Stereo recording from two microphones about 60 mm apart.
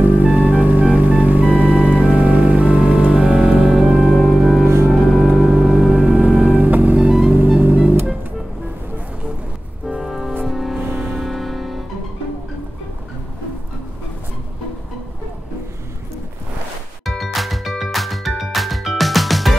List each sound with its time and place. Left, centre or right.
0.0 s music: right
0.3 s music: centre
4.6 s music: right
5.1 s music: centre
6.0 s music: right
7.1 s music: centre
7.6 s music: right
10.0 s music: centre
10.8 s music: right
11.1 s music: centre
17.0 s music: centre